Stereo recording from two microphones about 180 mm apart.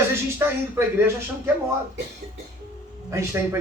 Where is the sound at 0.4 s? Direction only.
15° right (ahead or behind).